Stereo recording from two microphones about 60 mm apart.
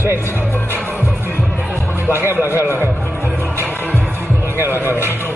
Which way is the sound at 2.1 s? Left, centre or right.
Right.